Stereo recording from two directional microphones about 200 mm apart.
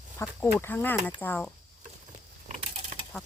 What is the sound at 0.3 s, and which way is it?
Speech, 10° left (ahead or behind).